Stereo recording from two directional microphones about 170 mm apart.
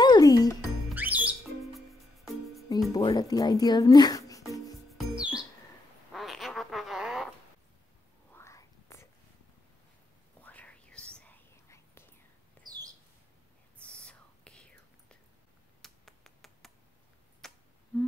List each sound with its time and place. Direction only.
0.0 s music: 25° left (ahead or behind)
0.9 s music: 10° right (ahead or behind)
2.9 s speech: 25° left (ahead or behind)
4.9 s music: 5° right (ahead or behind)
6.1 s quack: centre (ahead or behind)
8.3 s whispering: 15° left (ahead or behind)
10.4 s whispering: 10° left (ahead or behind)
12.6 s a sound: 25° right (ahead or behind)
13.8 s whispering: 5° left (ahead or behind)
15.8 s finger snapping: centre (ahead or behind)
17.4 s a sound: centre (ahead or behind)